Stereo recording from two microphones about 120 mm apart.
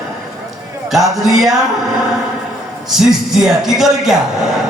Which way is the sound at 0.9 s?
Centre (ahead or behind).